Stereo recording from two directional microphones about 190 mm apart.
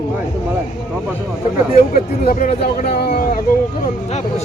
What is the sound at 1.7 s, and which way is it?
Speech, 45° left (ahead or behind).